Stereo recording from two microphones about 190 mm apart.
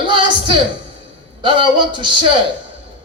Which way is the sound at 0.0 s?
25° right (ahead or behind).